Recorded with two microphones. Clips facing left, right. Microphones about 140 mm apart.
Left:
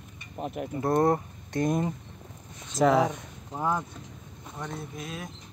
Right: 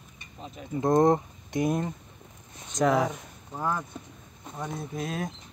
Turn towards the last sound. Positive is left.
turn(degrees=-40)  # may be behind; listen again after turning